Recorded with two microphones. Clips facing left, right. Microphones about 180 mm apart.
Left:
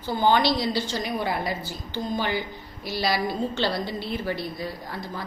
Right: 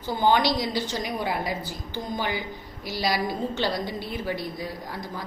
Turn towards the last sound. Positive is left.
turn(degrees=-15)  # may be behind; listen again after turning